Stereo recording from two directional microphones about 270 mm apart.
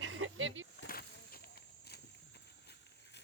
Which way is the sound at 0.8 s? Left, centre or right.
Left.